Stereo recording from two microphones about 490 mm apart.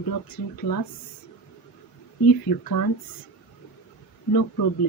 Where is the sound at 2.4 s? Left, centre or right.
Left.